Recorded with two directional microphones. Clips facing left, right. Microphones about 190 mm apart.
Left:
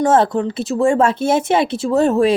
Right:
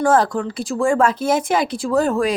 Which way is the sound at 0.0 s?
25° left (ahead or behind).